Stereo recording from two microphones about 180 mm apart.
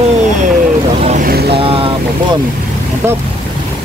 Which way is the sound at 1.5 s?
30° right (ahead or behind).